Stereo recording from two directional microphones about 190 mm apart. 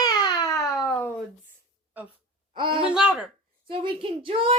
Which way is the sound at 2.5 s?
25° right (ahead or behind).